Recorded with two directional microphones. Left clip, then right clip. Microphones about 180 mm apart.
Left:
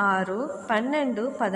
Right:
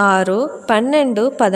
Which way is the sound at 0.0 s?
55° right (ahead or behind).